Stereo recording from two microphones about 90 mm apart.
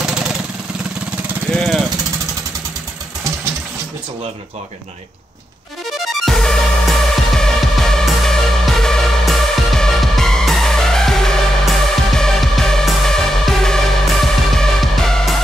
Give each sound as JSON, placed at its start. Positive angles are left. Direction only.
{"t": 1.5, "sound": "vehicle", "side_deg": 0}
{"t": 6.2, "sound": "music", "side_deg": 5}